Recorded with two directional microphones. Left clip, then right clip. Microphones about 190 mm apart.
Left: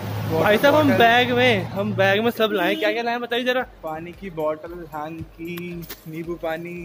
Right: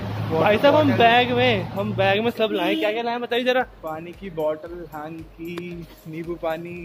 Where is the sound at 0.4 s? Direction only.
20° left (ahead or behind).